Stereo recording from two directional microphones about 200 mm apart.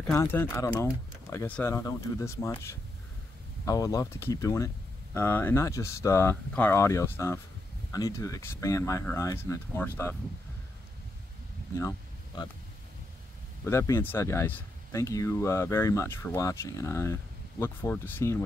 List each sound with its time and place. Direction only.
0.0 s speech: 15° left (ahead or behind)
13.7 s speech: 15° left (ahead or behind)